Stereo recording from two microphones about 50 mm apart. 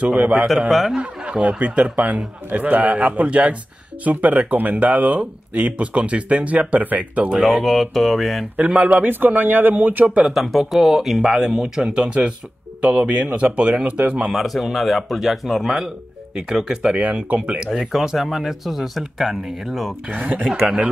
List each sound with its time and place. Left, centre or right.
0.0 s speech: right
0.6 s speech: centre
0.9 s speech: right
7.4 s speech: centre
8.5 s speech: right
10.2 s speech: centre
11.2 s speech: centre; by 14.2 s right
14.3 s speech: centre
16.9 s speech: right
17.6 s speech: centre
20.1 s speech: right
20.4 s speech: centre